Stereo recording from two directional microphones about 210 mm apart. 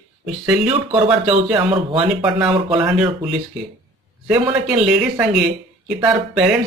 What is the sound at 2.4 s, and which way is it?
Speech, 10° right (ahead or behind).